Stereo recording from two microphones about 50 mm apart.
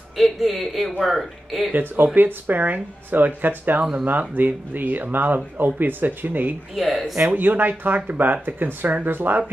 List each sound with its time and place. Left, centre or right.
0.2 s speech: centre
1.7 s speech: right
6.7 s speech: centre
7.2 s speech: right